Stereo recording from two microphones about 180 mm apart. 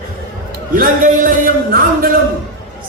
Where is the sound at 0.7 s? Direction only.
50° right (ahead or behind).